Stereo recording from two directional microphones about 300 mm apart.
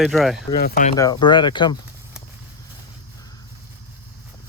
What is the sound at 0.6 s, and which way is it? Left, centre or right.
Speech, left.